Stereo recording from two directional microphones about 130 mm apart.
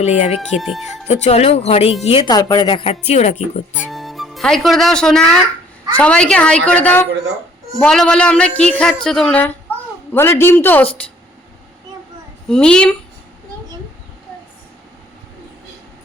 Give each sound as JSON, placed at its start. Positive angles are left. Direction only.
{"t": 0.0, "sound": "speech", "side_deg": 60}
{"t": 0.3, "sound": "speech", "side_deg": 0}
{"t": 0.9, "sound": "speech", "side_deg": 55}
{"t": 2.3, "sound": "a woman's voice", "side_deg": 30}
{"t": 2.8, "sound": "speech", "side_deg": 55}
{"t": 3.7, "sound": "a woman's voice", "side_deg": -5}
{"t": 12.5, "sound": "a woman's voice", "side_deg": 5}